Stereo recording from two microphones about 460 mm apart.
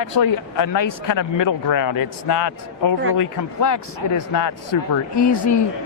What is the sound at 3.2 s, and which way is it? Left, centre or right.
Speech, left.